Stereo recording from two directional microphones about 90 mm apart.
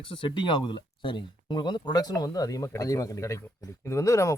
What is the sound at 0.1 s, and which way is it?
A man's voice, 65° left (ahead or behind).